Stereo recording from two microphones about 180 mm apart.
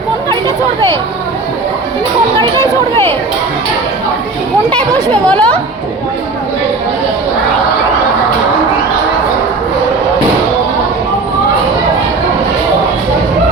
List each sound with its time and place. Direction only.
0.3 s chatter: 15° left (ahead or behind)
4.9 s speech: 10° left (ahead or behind)